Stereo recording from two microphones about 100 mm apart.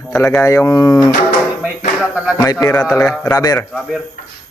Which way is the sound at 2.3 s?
35° left (ahead or behind).